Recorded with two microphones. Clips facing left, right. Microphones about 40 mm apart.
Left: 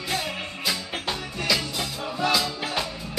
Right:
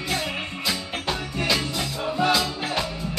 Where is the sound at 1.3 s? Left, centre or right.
Right.